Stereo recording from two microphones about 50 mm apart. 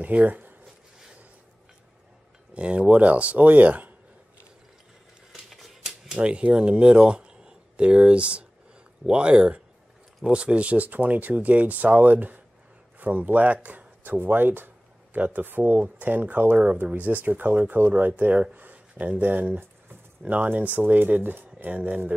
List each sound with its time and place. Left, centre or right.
0.0 s speech: right
2.5 s speech: right
5.3 s typewriter: centre
6.1 s speech: right
18.5 s a sound: right
19.2 s speech: right